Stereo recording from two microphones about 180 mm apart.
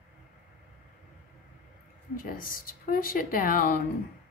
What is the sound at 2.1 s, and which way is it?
Speech, 50° left (ahead or behind).